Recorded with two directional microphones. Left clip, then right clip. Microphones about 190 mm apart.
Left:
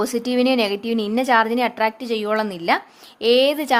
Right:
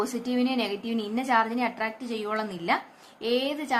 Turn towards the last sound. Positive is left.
turn(degrees=45)  # may be behind; listen again after turning